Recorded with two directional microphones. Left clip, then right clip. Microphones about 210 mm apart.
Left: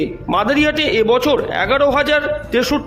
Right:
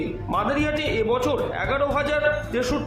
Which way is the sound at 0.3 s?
45° left (ahead or behind).